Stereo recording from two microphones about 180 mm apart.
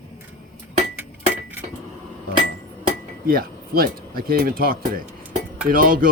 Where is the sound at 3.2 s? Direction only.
55° right (ahead or behind).